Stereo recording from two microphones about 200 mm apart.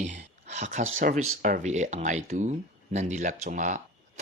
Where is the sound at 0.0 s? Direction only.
35° right (ahead or behind).